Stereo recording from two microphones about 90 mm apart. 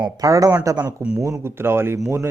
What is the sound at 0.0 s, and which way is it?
Speech, 40° right (ahead or behind).